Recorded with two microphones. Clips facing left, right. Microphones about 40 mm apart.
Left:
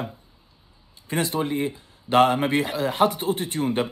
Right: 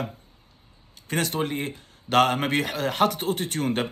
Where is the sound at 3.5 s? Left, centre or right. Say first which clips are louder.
Left 2 dB; right.